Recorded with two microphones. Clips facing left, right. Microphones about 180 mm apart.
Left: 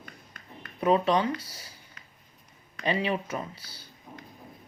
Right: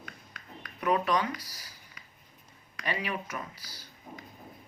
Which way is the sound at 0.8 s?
30° left (ahead or behind).